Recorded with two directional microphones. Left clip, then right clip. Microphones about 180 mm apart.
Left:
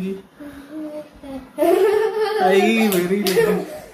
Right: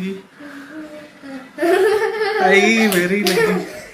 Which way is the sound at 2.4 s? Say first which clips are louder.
Right 3 dB; 5° left (ahead or behind).